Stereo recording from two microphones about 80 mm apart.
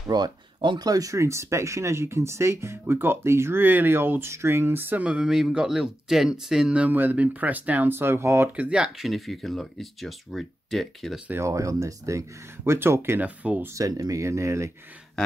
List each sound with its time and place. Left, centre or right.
0.1 s speech: right
0.7 s speech: right
5.0 s speech: centre; by 8.5 s right
8.5 s speech: centre
11.3 s speech: right
13.2 s speech: centre
13.7 s speech: right
15.2 s a sound: centre